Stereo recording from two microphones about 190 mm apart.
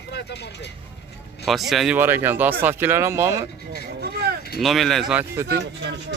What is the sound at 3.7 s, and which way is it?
Vehicle, 55° right (ahead or behind).